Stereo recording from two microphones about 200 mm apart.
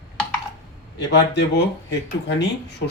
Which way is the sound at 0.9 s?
55° left (ahead or behind).